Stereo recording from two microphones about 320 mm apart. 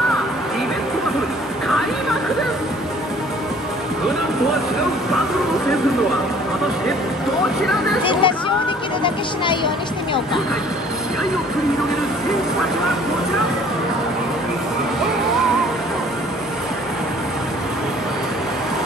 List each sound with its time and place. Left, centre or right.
8.0 s chatter: centre
9.0 s speech: centre